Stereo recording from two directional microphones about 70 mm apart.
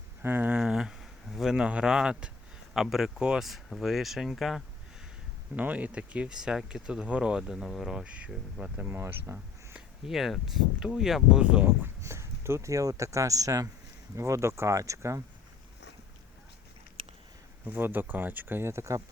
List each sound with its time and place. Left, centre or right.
0.2 s speech: right
0.5 s a sound: centre
1.5 s speech: centre
5.5 s speech: right; by 8.0 s centre
8.3 s speech: centre
8.9 s speech: right
10.1 s speech: centre
11.4 s speech: centre
12.0 s speech: right
17.7 s speech: right